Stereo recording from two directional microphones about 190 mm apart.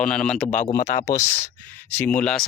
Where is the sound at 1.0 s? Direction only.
15° left (ahead or behind).